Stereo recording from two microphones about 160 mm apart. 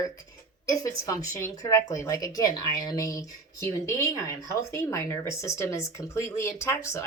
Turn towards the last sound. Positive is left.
turn(degrees=15)  # may be behind; listen again after turning